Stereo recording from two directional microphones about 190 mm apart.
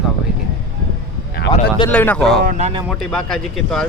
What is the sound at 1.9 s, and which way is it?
Speech, 10° left (ahead or behind).